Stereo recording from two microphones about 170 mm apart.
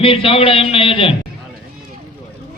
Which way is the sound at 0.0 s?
30° left (ahead or behind).